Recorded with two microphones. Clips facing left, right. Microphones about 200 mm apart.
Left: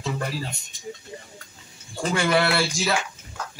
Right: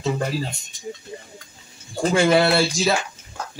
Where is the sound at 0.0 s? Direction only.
25° right (ahead or behind).